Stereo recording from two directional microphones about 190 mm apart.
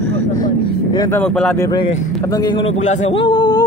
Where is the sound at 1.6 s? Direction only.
20° left (ahead or behind).